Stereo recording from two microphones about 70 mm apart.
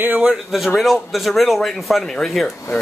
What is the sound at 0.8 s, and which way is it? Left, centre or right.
Speech, centre.